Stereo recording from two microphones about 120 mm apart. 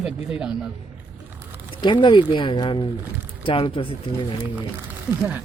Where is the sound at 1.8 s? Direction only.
40° left (ahead or behind).